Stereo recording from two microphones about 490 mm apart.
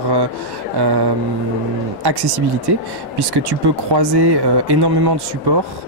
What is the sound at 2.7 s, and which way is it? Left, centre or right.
Speech, right.